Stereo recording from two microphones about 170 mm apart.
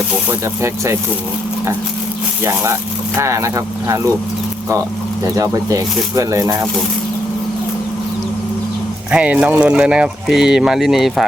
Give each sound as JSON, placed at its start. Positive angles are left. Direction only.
{"t": 0.3, "sound": "speech", "side_deg": -15}
{"t": 2.4, "sound": "speech", "side_deg": -15}
{"t": 5.2, "sound": "speech", "side_deg": -20}
{"t": 9.1, "sound": "speech", "side_deg": -5}